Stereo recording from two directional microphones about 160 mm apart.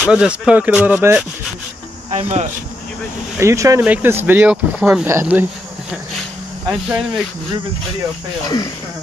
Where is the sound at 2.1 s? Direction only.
45° right (ahead or behind).